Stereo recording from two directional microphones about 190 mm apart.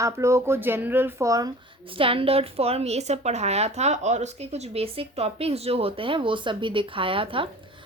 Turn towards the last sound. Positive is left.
turn(degrees=-30)  # may be behind; listen again after turning